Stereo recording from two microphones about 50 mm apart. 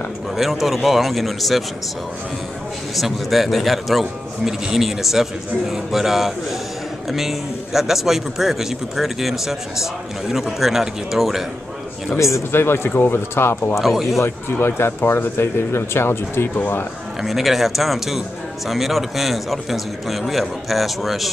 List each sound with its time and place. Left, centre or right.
0.4 s speech: centre
3.0 s speech: centre
12.2 s a man's voice: left
12.5 s speech: left
13.7 s speech: centre
14.2 s speech: left
17.2 s speech: centre